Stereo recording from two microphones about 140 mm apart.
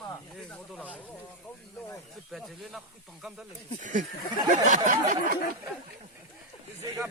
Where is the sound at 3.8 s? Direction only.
65° right (ahead or behind).